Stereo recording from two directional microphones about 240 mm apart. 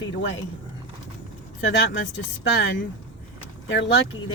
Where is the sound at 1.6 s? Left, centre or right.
Left.